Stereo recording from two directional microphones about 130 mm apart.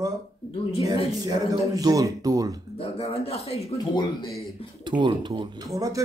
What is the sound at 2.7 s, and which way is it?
Speech, 50° left (ahead or behind).